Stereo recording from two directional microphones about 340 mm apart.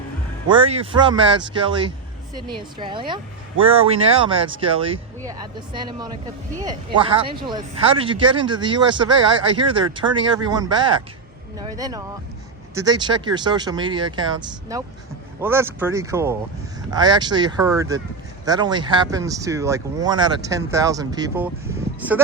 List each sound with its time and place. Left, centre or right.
0.4 s speech: centre